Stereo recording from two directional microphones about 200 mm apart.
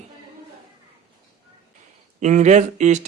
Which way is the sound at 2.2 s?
35° right (ahead or behind).